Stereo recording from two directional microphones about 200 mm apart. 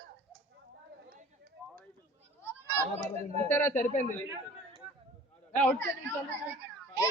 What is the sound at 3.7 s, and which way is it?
Speech, 40° left (ahead or behind).